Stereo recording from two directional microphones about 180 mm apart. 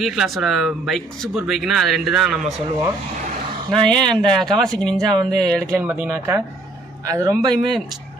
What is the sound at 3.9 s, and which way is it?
Speech, 5° left (ahead or behind).